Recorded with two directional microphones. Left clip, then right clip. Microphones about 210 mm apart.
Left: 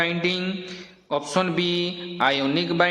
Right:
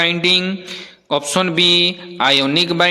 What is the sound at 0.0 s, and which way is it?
Mantra, 35° right (ahead or behind).